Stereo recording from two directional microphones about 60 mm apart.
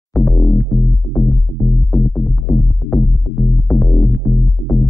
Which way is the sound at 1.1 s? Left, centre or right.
Left.